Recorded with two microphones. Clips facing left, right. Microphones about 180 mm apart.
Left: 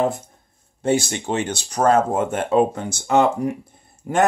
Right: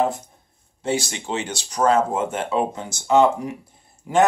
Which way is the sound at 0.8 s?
50° left (ahead or behind).